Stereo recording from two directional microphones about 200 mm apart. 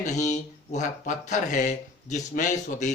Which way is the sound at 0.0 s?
35° left (ahead or behind).